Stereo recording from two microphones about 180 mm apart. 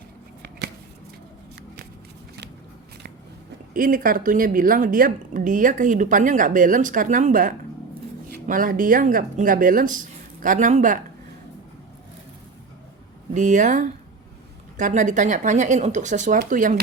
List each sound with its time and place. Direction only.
3.8 s a woman's voice: 50° right (ahead or behind)
13.3 s a woman's voice: 45° right (ahead or behind)